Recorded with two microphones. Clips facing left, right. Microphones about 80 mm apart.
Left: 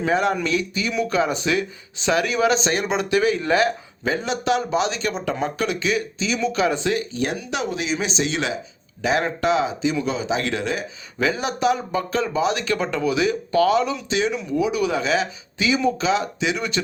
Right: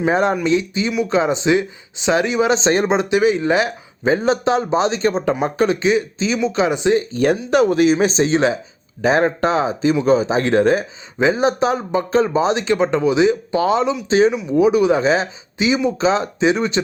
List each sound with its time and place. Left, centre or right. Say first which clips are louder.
0.0 s speech: right 4 dB; right
4.1 s speech: right 6 dB; right
7.1 s speech: right 9 dB; right
11.2 s speech: right 6 dB; right
14.1 s speech: right 7 dB; right